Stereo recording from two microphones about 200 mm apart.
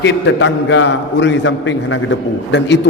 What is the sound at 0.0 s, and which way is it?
A man's voice, 65° left (ahead or behind).